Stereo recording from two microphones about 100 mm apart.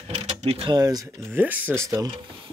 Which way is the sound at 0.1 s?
90° right.